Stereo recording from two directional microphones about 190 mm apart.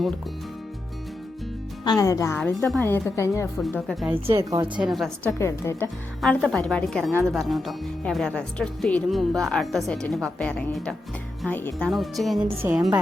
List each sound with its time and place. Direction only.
1.8 s a woman's voice: 20° left (ahead or behind)
3.8 s speech: centre (ahead or behind)
4.1 s a woman's voice: 15° right (ahead or behind)
4.7 s speech: 5° right (ahead or behind)
5.4 s a woman's voice: 15° left (ahead or behind)
6.2 s a woman's voice: centre (ahead or behind)
12.6 s a woman's voice: 15° right (ahead or behind)